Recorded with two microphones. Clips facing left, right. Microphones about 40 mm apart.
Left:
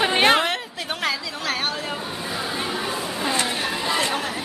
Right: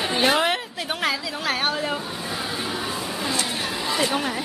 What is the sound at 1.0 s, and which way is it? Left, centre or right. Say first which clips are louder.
Speech: right 1 dB; centre.